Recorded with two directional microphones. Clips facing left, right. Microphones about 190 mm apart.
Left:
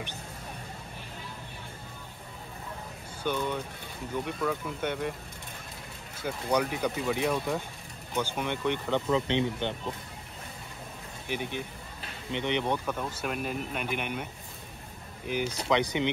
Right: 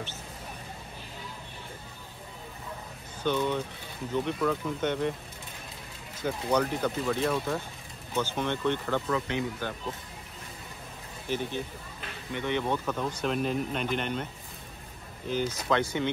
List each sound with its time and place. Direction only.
3.3 s speech: 10° left (ahead or behind)
6.2 s speech: 10° left (ahead or behind); by 9.8 s 25° left (ahead or behind)
11.2 s speech: 15° left (ahead or behind)
15.2 s speech: 15° left (ahead or behind)